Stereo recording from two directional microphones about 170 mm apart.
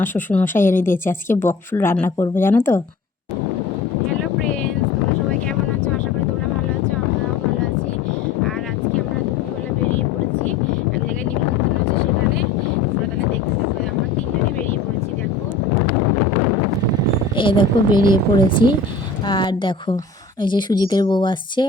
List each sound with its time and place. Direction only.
0.0 s speech: 10° left (ahead or behind)
17.3 s a woman's voice: 30° left (ahead or behind)